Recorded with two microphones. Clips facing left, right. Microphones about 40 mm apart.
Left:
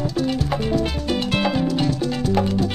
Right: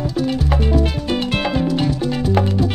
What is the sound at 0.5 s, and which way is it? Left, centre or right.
Music, centre.